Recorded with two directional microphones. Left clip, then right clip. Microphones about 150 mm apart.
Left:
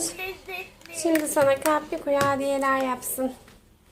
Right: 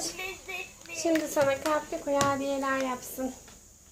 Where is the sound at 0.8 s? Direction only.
50° left (ahead or behind).